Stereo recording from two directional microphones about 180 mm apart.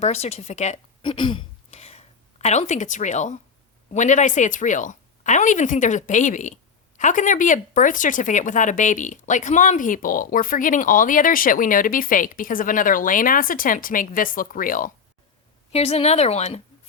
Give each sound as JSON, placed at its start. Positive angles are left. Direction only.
{"t": 0.0, "sound": "speech", "side_deg": 35}
{"t": 1.0, "sound": "speech", "side_deg": 25}
{"t": 15.7, "sound": "speech", "side_deg": 35}